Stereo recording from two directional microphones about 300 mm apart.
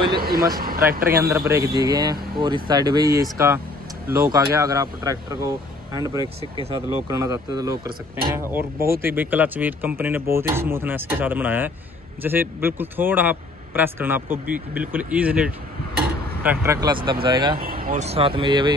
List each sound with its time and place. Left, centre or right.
0.2 s speech: right
1.3 s speech: centre
17.6 s speech: right